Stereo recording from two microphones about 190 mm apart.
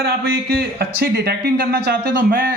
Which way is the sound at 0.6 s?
55° right (ahead or behind).